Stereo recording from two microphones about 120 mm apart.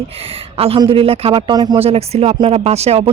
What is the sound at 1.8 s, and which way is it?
Speech, 55° right (ahead or behind).